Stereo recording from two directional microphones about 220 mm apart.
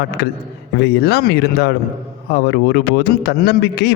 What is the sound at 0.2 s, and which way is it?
A man's voice, 45° left (ahead or behind).